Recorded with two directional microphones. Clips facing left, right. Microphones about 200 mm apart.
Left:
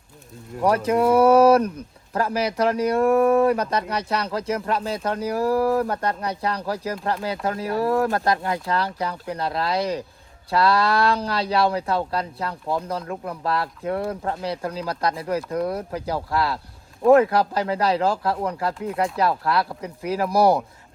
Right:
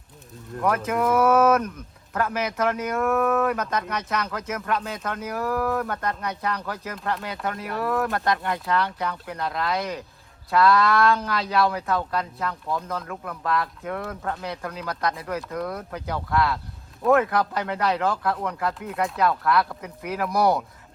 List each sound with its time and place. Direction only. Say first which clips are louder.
0.6 s speech: left 4 dB; 35° left (ahead or behind)